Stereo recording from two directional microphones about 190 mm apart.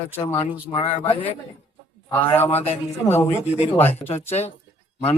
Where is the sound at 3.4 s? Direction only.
35° left (ahead or behind).